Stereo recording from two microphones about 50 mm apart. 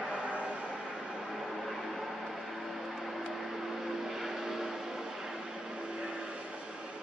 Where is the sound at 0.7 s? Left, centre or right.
Centre.